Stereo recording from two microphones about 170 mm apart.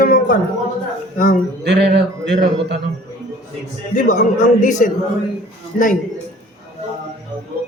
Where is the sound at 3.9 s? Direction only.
50° left (ahead or behind).